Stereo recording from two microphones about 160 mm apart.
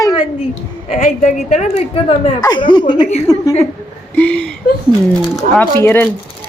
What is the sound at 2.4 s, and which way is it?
A woman's voice, 25° left (ahead or behind).